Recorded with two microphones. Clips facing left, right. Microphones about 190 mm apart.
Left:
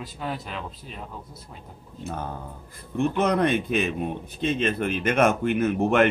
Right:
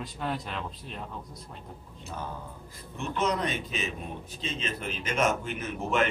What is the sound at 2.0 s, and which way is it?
A man's voice, 55° left (ahead or behind).